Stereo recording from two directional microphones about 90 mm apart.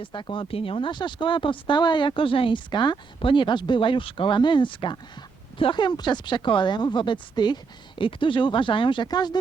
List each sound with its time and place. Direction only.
0.0 s speech: 65° left (ahead or behind)
9.0 s speech: 50° left (ahead or behind)